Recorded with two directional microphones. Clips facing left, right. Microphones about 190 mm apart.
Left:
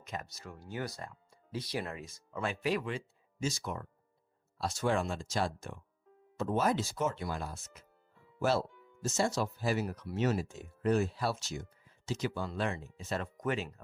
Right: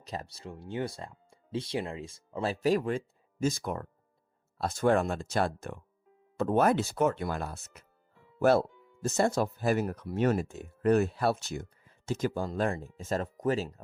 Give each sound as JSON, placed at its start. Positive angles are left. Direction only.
{"t": 0.0, "sound": "speech", "side_deg": -35}